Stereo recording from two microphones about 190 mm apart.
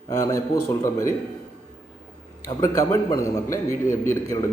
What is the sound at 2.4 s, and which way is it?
A man's voice, 15° left (ahead or behind).